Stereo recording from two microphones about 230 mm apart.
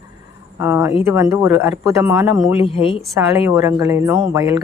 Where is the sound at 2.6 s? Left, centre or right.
Left.